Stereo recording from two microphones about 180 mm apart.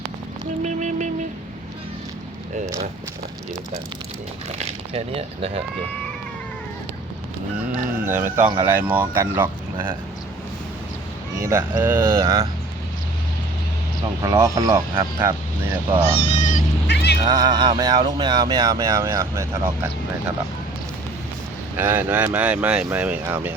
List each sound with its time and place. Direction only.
0.6 s music: 40° right (ahead or behind)
4.5 s speech: 35° right (ahead or behind)
8.0 s speech: 15° right (ahead or behind)
11.4 s speech: 15° right (ahead or behind)
12.2 s speech: 30° right (ahead or behind)
14.2 s speech: 20° right (ahead or behind)
15.7 s speech: 10° right (ahead or behind)
16.1 s speech: 40° left (ahead or behind)
16.8 s music: 70° left (ahead or behind)
17.2 s speech: 20° right (ahead or behind)
21.8 s speech: 10° right (ahead or behind)